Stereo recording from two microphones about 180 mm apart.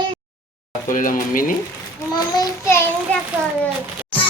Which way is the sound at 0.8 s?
45° left (ahead or behind).